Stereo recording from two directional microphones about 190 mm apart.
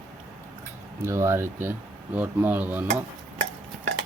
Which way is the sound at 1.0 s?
15° right (ahead or behind).